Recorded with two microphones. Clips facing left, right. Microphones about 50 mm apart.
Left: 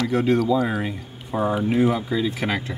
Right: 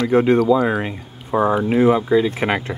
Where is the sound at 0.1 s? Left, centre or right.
Right.